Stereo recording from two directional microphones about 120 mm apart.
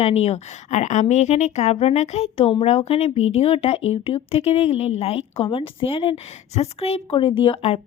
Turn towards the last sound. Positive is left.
turn(degrees=55)  # may be behind; listen again after turning